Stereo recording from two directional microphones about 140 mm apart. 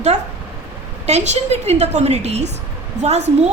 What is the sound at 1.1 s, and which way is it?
A woman's voice, 50° right (ahead or behind).